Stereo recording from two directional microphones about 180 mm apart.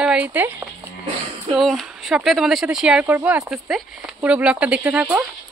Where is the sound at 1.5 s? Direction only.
Centre (ahead or behind).